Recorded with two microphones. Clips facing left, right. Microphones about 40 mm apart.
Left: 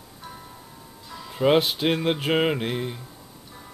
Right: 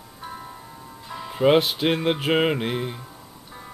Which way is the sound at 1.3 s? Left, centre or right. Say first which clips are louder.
Right 2 dB; centre.